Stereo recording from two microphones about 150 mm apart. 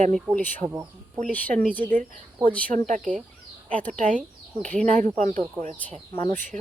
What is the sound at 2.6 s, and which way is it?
A woman's voice, 60° right (ahead or behind).